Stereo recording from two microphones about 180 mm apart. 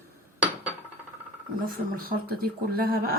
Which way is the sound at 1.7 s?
50° right (ahead or behind).